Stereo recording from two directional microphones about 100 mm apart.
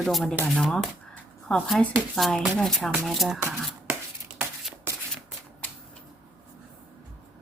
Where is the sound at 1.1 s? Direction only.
10° left (ahead or behind).